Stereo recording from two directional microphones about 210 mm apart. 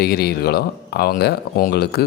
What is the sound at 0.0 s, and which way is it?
Speech, 50° left (ahead or behind).